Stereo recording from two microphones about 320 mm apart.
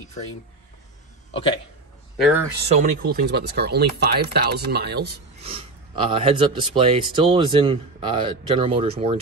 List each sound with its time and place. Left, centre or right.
2.1 s a man's voice: centre
2.7 s speech: right
5.4 s speech: centre